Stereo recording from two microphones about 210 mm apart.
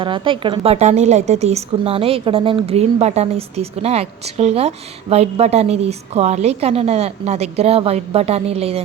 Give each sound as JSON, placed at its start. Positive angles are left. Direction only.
{"t": 0.0, "sound": "a woman's voice", "side_deg": -25}